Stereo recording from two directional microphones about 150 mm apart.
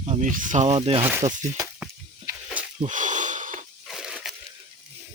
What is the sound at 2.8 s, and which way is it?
Wheeze, 55° right (ahead or behind).